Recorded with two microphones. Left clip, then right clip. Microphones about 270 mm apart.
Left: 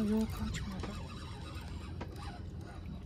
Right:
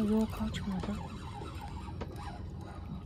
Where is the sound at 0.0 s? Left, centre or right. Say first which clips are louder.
Right 3 dB; centre.